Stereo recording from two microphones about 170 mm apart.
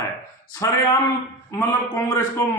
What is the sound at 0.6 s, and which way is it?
Speech, 20° left (ahead or behind).